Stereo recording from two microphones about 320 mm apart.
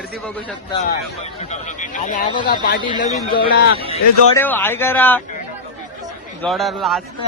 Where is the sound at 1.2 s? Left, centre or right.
Left.